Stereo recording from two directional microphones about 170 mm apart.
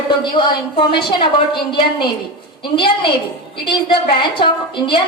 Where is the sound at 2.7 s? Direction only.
30° left (ahead or behind).